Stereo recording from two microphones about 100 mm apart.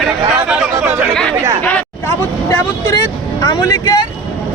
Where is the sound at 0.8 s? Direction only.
20° right (ahead or behind).